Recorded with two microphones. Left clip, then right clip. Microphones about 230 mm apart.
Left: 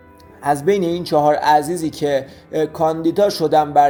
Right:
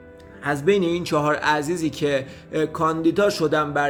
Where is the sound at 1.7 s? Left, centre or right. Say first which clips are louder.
Left 4 dB; centre.